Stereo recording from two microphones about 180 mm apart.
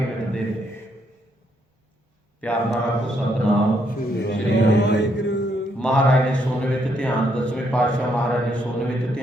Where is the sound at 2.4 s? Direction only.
5° left (ahead or behind).